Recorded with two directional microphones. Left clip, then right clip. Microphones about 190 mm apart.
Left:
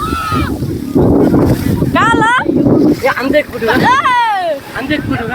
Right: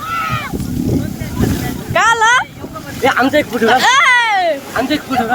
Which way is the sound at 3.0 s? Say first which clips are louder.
Even; 20° right (ahead or behind).